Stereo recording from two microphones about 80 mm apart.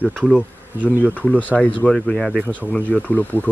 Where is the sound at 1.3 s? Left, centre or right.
Centre.